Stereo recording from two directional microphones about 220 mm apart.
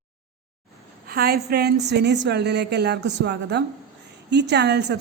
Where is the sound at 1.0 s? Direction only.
45° right (ahead or behind).